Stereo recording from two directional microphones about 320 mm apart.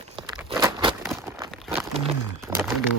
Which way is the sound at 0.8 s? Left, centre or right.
Centre.